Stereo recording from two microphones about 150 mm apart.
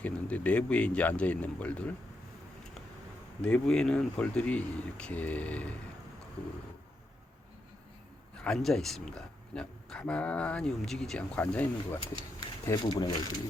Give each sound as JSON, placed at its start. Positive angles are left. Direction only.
{"t": 0.0, "sound": "speech", "side_deg": 10}
{"t": 3.4, "sound": "speech", "side_deg": 5}
{"t": 8.4, "sound": "speech", "side_deg": 5}
{"t": 12.6, "sound": "speech", "side_deg": 30}